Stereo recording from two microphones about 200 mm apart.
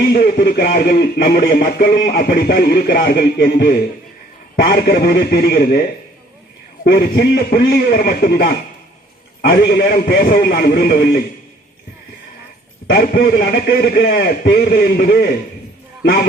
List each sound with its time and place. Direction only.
0.1 s a man's voice: 45° left (ahead or behind)
6.8 s a man's voice: 50° left (ahead or behind)
12.9 s a man's voice: 50° left (ahead or behind)